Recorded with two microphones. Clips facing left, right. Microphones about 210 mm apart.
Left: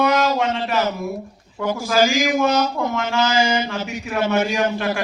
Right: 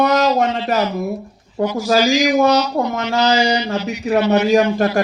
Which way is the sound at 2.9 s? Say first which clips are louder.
Right 4 dB; 40° right (ahead or behind).